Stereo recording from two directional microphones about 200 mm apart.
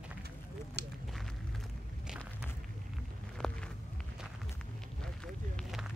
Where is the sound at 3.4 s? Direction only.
5° left (ahead or behind).